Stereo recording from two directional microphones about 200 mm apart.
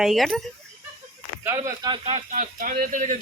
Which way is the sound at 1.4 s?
15° right (ahead or behind).